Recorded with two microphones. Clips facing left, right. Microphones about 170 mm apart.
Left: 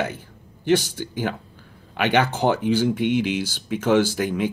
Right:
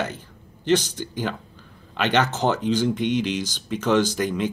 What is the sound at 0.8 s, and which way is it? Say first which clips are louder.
Speech: left 1 dB; 15° right (ahead or behind).